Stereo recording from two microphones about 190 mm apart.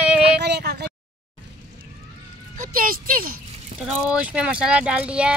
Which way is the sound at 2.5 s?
45° right (ahead or behind).